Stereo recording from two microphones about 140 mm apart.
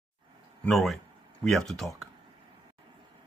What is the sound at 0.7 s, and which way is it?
Speech, centre (ahead or behind).